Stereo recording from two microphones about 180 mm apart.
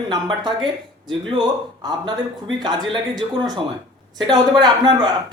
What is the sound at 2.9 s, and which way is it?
Speech, 25° right (ahead or behind).